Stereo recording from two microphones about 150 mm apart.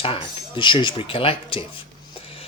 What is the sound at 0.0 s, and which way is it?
Speech, 35° left (ahead or behind).